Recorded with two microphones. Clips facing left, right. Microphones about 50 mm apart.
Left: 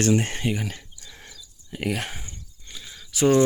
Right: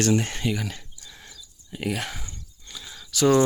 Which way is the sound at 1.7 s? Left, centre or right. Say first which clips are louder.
Left 1 dB; left.